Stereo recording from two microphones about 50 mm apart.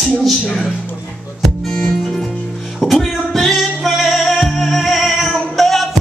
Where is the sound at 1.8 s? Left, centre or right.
Centre.